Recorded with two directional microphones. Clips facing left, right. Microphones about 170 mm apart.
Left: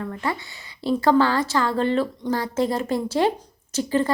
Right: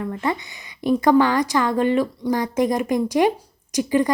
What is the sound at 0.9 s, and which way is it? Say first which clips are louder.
A woman's voice: right 2 dB; 15° right (ahead or behind).